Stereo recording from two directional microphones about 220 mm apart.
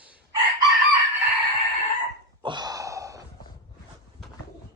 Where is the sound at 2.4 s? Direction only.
20° right (ahead or behind).